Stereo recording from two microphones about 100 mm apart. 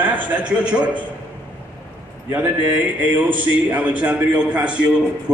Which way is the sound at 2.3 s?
15° right (ahead or behind).